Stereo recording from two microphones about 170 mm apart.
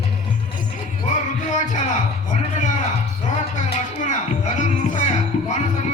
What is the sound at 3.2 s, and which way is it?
Music, 45° left (ahead or behind).